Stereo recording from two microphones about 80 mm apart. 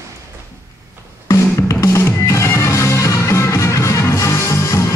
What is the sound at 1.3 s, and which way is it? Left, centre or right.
Music, left.